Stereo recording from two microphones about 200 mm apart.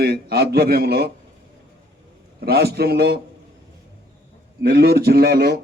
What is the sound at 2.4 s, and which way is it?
Speech, 50° right (ahead or behind).